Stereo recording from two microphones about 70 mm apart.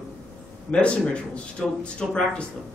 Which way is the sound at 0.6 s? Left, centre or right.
Centre.